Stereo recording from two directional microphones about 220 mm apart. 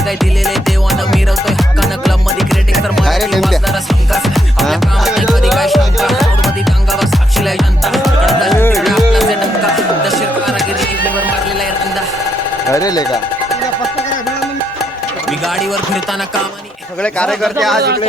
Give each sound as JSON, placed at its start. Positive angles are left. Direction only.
{"t": 0.2, "sound": "music", "side_deg": 0}
{"t": 12.7, "sound": "speech", "side_deg": 15}
{"t": 15.3, "sound": "music", "side_deg": 0}
{"t": 17.0, "sound": "speech", "side_deg": 5}